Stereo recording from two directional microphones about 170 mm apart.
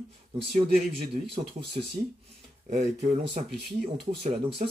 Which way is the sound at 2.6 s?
45° right (ahead or behind).